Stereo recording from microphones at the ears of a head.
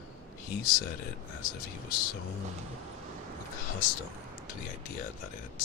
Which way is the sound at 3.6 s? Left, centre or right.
Left.